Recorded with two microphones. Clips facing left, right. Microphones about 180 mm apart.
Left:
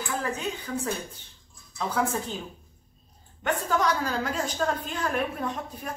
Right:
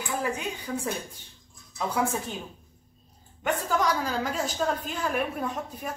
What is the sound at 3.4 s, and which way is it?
A woman's voice, 10° right (ahead or behind).